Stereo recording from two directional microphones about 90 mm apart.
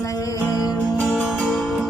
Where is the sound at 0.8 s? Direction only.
10° right (ahead or behind).